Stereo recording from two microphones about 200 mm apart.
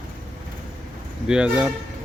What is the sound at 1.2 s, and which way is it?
Speech, 5° right (ahead or behind).